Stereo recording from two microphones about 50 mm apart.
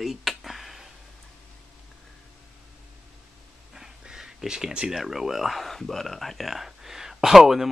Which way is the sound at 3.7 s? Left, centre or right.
Centre.